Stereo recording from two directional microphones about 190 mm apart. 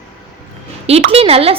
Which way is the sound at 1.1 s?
30° right (ahead or behind).